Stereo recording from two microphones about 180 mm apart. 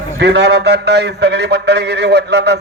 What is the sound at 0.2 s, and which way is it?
A man's voice, 65° right (ahead or behind).